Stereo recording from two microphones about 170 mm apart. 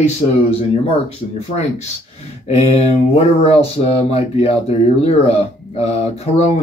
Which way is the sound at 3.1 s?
35° left (ahead or behind).